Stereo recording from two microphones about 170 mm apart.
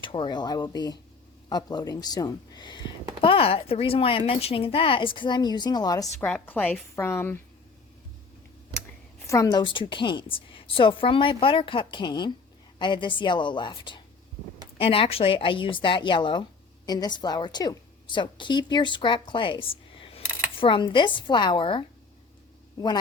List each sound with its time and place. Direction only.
0.0 s a woman's voice: 30° left (ahead or behind)
6.2 s a woman's voice: 10° left (ahead or behind)
9.2 s a woman's voice: 20° left (ahead or behind)